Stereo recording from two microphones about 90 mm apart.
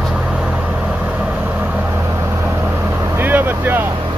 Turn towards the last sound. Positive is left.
turn(degrees=-20)  # may be behind; listen again after turning